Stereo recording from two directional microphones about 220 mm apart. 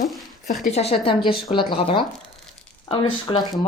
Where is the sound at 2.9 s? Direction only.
20° left (ahead or behind).